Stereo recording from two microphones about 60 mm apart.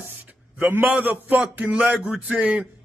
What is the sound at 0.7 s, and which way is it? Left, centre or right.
A man's voice, right.